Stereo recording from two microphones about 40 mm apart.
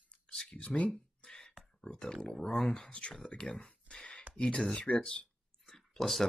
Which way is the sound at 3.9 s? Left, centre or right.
Centre.